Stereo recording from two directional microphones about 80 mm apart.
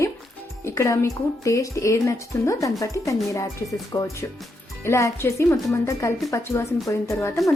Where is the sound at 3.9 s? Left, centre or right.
Left.